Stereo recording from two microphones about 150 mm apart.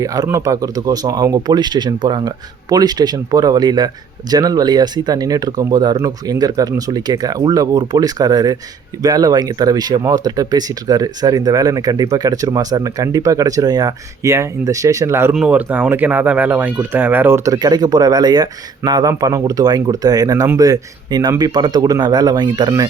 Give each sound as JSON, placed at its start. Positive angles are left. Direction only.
{"t": 0.0, "sound": "speech", "side_deg": -25}